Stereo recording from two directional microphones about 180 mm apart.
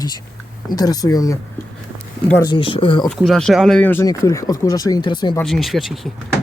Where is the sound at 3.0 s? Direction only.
Centre (ahead or behind); by 5.3 s 25° left (ahead or behind).